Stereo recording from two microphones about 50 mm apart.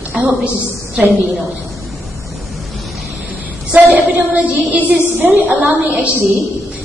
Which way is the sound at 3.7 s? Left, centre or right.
Right.